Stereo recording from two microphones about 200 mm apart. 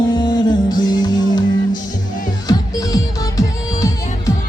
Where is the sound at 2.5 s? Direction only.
20° left (ahead or behind).